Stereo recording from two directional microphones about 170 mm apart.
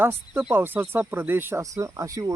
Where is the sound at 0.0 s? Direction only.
10° right (ahead or behind).